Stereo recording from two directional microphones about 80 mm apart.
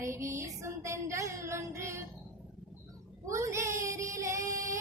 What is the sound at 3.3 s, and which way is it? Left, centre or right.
Music, right.